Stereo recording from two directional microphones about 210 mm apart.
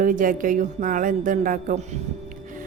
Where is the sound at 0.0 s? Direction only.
40° right (ahead or behind).